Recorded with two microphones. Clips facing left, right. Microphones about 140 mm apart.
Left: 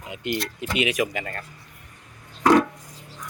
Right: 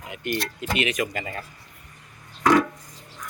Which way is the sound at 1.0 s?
Centre (ahead or behind).